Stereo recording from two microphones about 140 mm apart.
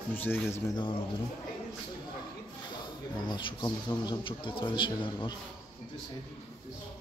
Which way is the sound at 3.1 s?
30° left (ahead or behind).